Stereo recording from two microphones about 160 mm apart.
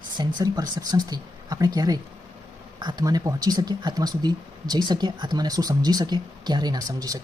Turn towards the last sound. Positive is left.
turn(degrees=-20)  # may be behind; listen again after turning